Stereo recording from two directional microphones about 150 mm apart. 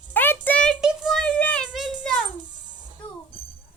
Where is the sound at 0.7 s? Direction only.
Centre (ahead or behind).